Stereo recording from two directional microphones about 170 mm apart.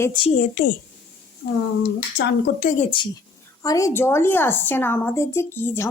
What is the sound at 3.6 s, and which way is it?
A woman's voice, 20° left (ahead or behind).